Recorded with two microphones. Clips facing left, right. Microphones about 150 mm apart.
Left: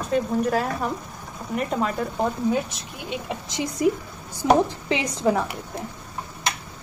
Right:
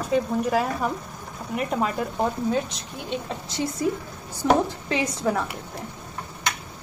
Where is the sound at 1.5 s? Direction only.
5° right (ahead or behind).